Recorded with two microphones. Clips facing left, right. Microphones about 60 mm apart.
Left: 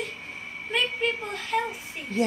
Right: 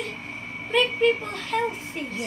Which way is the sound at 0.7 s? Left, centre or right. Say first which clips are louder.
Right 6 dB; centre.